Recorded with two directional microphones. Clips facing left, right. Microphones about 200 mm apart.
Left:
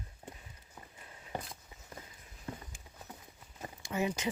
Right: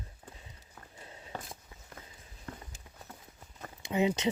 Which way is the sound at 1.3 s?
15° left (ahead or behind).